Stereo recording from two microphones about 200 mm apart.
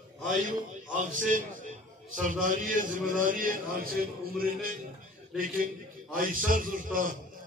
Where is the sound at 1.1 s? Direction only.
40° right (ahead or behind).